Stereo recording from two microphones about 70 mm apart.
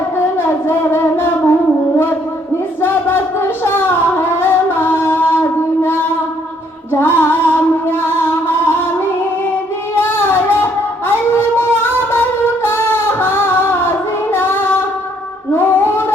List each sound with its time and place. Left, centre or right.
0.3 s music: left
2.8 s singing: left
6.9 s music: left
9.9 s a sound: left
12.6 s singing: left
15.5 s a sound: left